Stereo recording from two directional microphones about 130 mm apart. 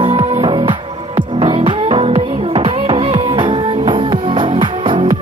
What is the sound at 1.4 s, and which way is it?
Music, 55° right (ahead or behind).